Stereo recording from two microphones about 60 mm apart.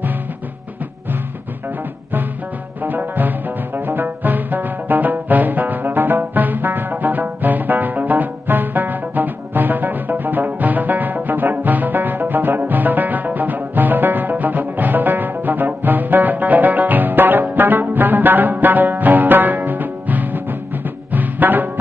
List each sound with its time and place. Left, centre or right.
2.8 s music: right